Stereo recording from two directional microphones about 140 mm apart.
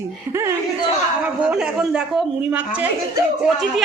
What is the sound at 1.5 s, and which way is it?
Speech, 5° right (ahead or behind).